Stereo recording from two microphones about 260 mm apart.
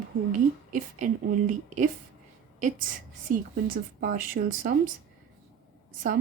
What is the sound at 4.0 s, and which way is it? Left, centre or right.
Speech, right.